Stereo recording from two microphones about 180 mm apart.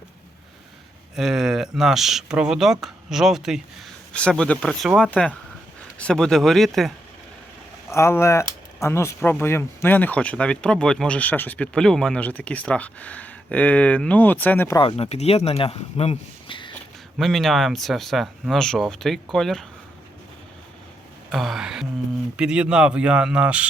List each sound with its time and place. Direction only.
1.1 s speech: 5° right (ahead or behind)
7.9 s speech: 15° left (ahead or behind)
14.8 s speech: 30° left (ahead or behind)
16.7 s speech: centre (ahead or behind)
21.2 s speech: centre (ahead or behind)